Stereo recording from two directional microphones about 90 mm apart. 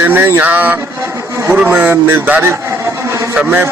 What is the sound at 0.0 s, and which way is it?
A man's voice, 25° right (ahead or behind).